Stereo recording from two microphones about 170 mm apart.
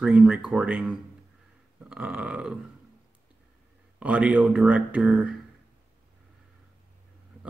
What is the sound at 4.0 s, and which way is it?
Speech, 5° right (ahead or behind).